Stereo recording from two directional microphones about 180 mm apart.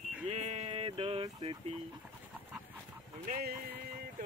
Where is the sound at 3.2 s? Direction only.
50° right (ahead or behind).